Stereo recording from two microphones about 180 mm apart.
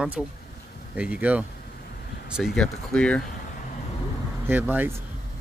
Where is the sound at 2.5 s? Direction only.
5° left (ahead or behind).